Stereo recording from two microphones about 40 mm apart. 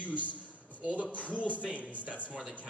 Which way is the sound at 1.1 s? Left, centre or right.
Left.